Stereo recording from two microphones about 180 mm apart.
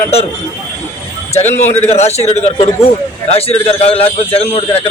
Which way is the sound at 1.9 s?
35° left (ahead or behind).